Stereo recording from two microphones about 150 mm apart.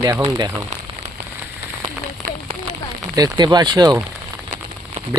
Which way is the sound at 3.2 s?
25° right (ahead or behind).